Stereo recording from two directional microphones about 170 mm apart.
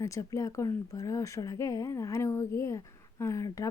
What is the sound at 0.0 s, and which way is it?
Speech, 20° left (ahead or behind).